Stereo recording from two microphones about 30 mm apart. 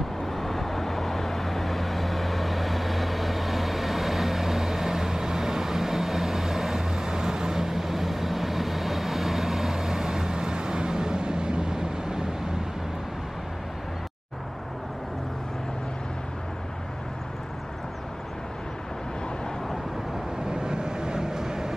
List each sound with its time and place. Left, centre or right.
0.2 s vehicle: centre; by 12.4 s right
20.4 s vehicle: right